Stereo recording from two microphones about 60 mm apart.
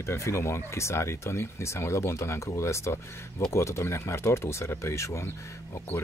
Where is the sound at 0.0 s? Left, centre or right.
Left.